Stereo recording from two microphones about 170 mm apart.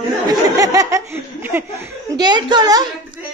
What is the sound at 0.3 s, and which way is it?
Speech, 20° right (ahead or behind).